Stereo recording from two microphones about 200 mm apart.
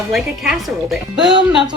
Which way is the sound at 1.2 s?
20° right (ahead or behind).